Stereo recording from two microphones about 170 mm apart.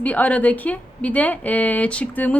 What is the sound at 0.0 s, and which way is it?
A woman's voice, 10° left (ahead or behind).